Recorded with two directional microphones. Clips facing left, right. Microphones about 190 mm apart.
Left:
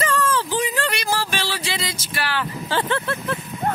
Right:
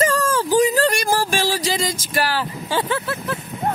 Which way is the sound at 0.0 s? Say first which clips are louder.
Right 3 dB; 40° right (ahead or behind).